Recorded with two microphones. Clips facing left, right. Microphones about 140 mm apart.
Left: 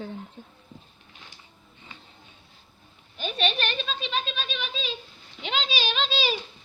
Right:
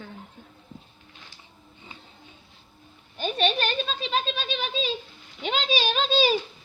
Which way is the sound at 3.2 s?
40° right (ahead or behind).